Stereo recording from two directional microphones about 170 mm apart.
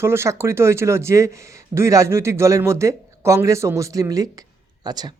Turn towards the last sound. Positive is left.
turn(degrees=-25)  # may be behind; listen again after turning